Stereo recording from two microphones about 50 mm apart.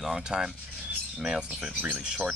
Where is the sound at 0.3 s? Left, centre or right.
Centre.